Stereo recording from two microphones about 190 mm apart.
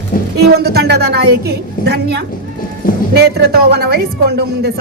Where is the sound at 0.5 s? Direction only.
60° right (ahead or behind).